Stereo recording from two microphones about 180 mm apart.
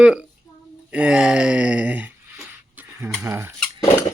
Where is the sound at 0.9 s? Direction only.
5° right (ahead or behind).